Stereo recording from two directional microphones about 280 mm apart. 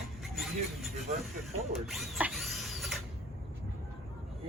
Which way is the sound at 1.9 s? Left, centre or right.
Centre.